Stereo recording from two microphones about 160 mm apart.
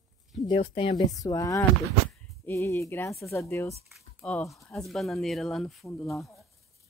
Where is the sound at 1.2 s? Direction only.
20° left (ahead or behind); by 6.1 s centre (ahead or behind).